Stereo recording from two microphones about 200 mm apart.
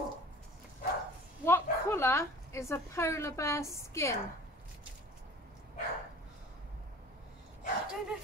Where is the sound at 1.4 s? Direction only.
10° left (ahead or behind).